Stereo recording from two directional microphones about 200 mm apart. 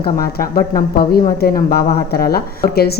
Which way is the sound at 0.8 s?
45° left (ahead or behind).